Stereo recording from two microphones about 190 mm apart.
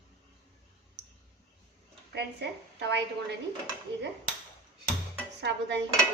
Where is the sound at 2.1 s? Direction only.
60° right (ahead or behind).